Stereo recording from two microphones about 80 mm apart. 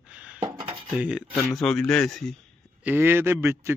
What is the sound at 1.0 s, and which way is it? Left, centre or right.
Speech, centre.